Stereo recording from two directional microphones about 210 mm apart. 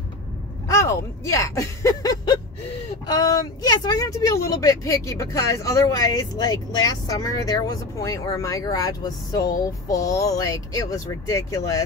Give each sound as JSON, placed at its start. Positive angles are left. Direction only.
{"t": 0.7, "sound": "speech", "side_deg": 15}